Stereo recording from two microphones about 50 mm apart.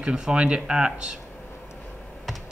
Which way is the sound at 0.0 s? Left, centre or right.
Centre.